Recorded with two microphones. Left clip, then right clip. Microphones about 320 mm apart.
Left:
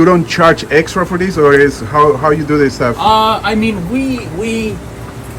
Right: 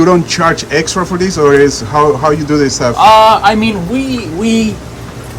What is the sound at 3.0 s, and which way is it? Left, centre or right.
Speech, centre.